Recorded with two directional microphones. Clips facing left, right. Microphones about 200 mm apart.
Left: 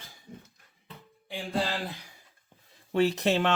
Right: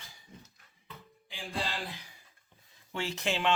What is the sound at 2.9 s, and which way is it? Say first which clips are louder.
Speech: left 9 dB; 35° left (ahead or behind).